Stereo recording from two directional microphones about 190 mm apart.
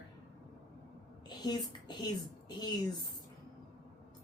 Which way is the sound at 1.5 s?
20° left (ahead or behind).